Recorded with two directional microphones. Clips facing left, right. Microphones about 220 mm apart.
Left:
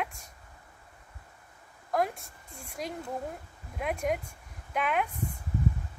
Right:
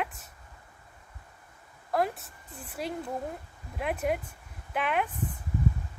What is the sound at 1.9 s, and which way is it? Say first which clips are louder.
Speech: right 1 dB; 5° right (ahead or behind).